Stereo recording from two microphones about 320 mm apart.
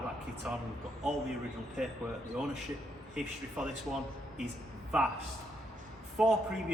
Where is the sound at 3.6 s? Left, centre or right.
Centre.